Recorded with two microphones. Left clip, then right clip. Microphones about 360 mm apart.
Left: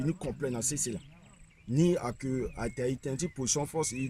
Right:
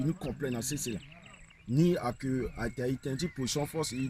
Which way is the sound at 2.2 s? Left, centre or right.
Centre.